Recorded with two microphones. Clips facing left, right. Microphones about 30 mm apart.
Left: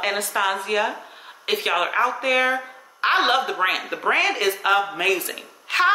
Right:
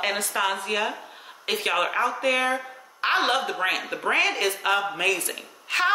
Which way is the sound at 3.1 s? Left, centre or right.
Left.